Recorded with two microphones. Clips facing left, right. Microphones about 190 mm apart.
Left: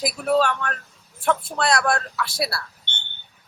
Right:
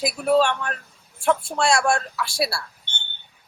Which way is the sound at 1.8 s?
25° right (ahead or behind).